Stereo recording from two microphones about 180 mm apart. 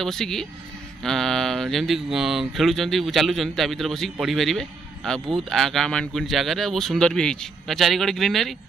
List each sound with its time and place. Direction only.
0.0 s speech: centre (ahead or behind)